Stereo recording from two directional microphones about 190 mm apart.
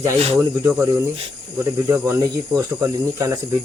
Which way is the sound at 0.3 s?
10° right (ahead or behind).